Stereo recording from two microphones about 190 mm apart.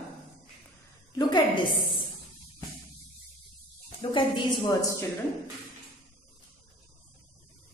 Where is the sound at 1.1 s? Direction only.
20° left (ahead or behind).